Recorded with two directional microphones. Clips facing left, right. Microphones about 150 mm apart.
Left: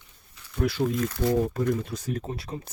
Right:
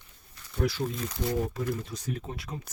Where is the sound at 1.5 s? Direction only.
45° left (ahead or behind).